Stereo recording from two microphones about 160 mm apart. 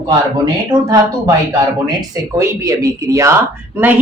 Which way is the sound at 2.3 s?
20° right (ahead or behind).